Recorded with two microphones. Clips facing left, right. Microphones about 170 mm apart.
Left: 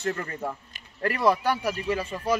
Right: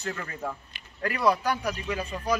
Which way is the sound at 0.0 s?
30° left (ahead or behind).